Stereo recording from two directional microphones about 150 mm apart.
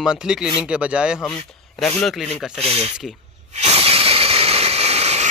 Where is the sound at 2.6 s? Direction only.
40° right (ahead or behind).